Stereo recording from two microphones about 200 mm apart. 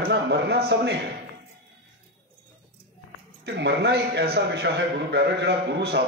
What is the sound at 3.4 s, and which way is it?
A man's voice, 60° right (ahead or behind).